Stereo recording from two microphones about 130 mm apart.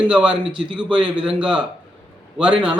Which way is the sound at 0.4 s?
40° right (ahead or behind).